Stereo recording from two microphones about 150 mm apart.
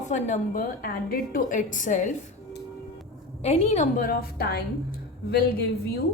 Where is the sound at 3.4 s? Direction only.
45° left (ahead or behind); by 4.6 s 90° left.